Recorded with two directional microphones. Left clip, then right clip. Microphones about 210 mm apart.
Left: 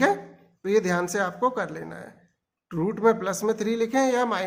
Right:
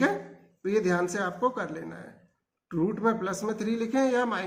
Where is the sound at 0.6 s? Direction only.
50° left (ahead or behind).